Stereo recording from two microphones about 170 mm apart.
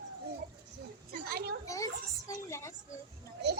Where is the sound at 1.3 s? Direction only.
65° right (ahead or behind).